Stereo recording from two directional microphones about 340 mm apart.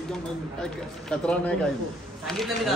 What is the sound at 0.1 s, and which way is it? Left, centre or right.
A man's voice, centre.